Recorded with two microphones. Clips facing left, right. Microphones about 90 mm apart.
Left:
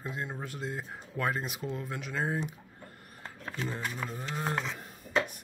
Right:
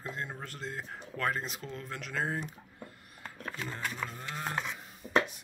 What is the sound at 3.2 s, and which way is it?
Speech, 20° left (ahead or behind).